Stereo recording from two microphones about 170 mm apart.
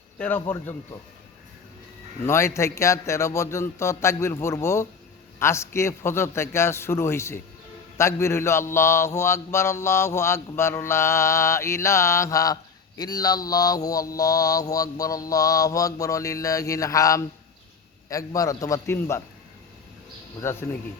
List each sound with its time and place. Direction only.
0.2 s mantra: 10° left (ahead or behind)
2.2 s mantra: 15° left (ahead or behind)
18.3 s mantra: 20° left (ahead or behind)
20.4 s mantra: 15° left (ahead or behind)